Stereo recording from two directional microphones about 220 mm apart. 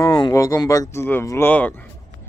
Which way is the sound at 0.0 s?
15° left (ahead or behind).